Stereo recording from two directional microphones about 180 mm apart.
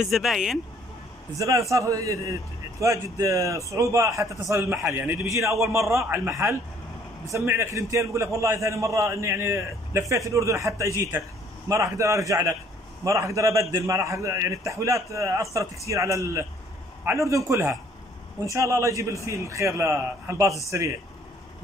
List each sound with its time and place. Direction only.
0.0 s speech: centre (ahead or behind)
1.4 s a man's voice: 15° right (ahead or behind)